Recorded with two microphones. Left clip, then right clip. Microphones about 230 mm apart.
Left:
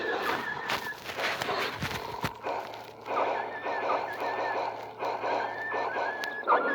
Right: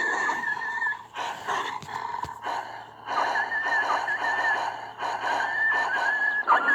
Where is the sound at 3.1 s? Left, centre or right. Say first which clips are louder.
Right 4 dB; right.